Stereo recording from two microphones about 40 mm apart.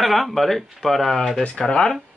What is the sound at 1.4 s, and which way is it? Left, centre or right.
Speech, left.